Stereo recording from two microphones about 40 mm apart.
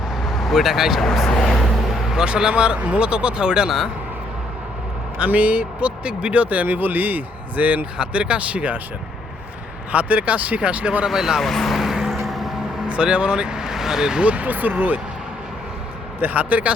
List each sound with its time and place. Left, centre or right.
0.2 s speech: centre
1.5 s vehicle: centre
2.1 s speech: right
5.1 s speech: right
7.9 s speech: right
9.9 s speech: right
11.0 s speech: centre
11.3 s speech: centre
11.8 s vehicle: centre
12.9 s speech: right
14.3 s speech: right
16.2 s speech: right